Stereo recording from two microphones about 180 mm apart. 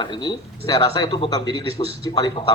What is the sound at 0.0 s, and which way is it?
Speech, 25° left (ahead or behind).